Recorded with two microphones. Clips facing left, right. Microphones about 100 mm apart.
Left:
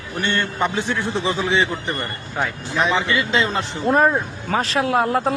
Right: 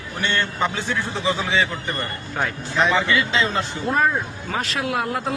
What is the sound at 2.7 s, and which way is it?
Speech, 15° left (ahead or behind).